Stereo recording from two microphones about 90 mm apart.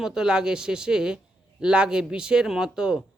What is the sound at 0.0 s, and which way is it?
A man's voice, 5° right (ahead or behind).